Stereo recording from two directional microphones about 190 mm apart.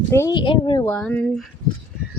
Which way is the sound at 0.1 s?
15° left (ahead or behind).